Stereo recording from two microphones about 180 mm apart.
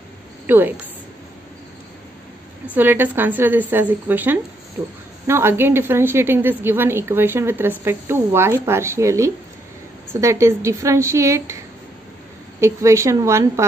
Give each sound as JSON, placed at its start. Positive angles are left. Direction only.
{"t": 0.5, "sound": "a woman's voice", "side_deg": -10}
{"t": 2.6, "sound": "a woman's voice", "side_deg": -10}
{"t": 12.5, "sound": "a woman's voice", "side_deg": -15}